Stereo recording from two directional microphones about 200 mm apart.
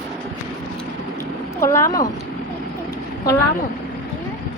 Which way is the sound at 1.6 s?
15° left (ahead or behind).